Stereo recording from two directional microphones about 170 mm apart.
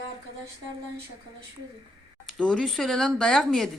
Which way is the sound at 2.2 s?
5° left (ahead or behind).